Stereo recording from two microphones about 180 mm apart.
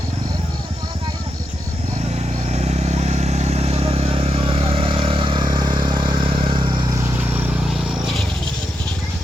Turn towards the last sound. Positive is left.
turn(degrees=-10)  # may be behind; listen again after turning